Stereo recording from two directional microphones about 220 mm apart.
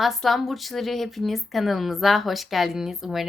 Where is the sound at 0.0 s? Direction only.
Centre (ahead or behind).